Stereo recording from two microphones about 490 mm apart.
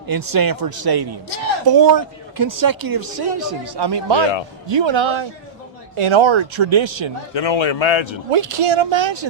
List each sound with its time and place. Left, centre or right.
0.1 s speech: right
7.3 s a man's voice: left
8.3 s speech: right